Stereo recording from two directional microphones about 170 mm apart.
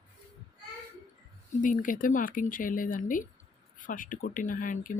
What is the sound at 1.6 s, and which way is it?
Speech, 50° left (ahead or behind).